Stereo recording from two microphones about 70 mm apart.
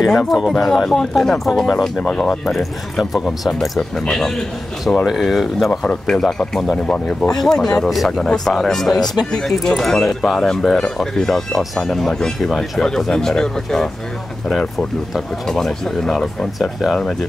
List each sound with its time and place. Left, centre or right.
0.0 s speech: centre
2.0 s speech: centre
2.5 s speech: centre
5.7 s speech: centre
6.1 s speech: centre